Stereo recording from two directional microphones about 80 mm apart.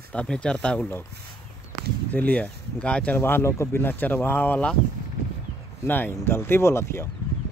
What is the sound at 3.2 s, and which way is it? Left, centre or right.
Speech, left.